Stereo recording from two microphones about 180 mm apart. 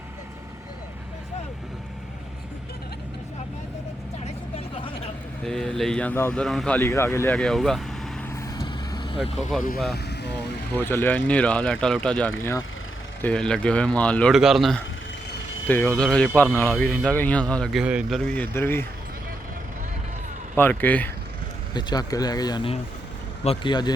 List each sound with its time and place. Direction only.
4.5 s vehicle: 30° left (ahead or behind)
5.5 s speech: centre (ahead or behind)
6.7 s speech: 15° left (ahead or behind)
7.3 s speech: centre (ahead or behind)
8.4 s vehicle: 20° left (ahead or behind)
10.8 s speech: 10° left (ahead or behind); by 18.2 s 5° right (ahead or behind)
18.2 s speech: 5° left (ahead or behind)
20.6 s speech: 10° left (ahead or behind)
21.7 s speech: 25° left (ahead or behind)